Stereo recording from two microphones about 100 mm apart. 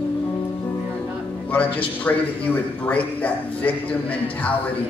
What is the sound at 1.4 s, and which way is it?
A man's voice, 15° left (ahead or behind).